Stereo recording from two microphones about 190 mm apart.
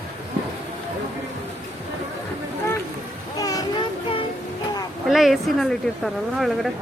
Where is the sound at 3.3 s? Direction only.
20° left (ahead or behind).